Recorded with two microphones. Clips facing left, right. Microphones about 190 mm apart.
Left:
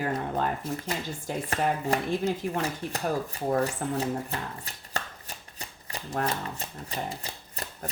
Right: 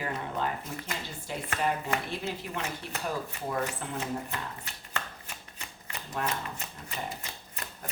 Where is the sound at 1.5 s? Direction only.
35° left (ahead or behind).